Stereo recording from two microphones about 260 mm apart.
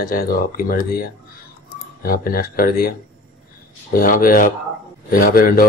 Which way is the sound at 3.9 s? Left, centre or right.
Left.